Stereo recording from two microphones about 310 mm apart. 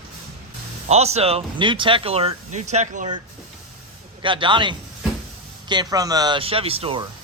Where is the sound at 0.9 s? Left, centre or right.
Centre.